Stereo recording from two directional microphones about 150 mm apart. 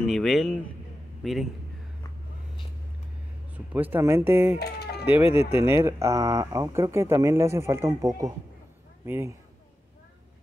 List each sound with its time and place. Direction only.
0.0 s a man's voice: centre (ahead or behind)
3.5 s speech: 10° right (ahead or behind)
4.6 s a sound: 90° left
5.0 s speech: 10° right (ahead or behind)